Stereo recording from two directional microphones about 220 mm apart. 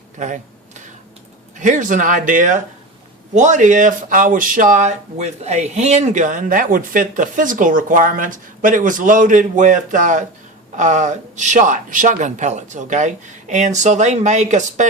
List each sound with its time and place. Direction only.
0.2 s speech: 35° right (ahead or behind)
1.5 s speech: 35° right (ahead or behind)